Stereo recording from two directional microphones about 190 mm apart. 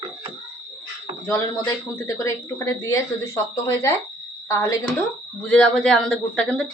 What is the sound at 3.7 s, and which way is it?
Speech, 15° left (ahead or behind).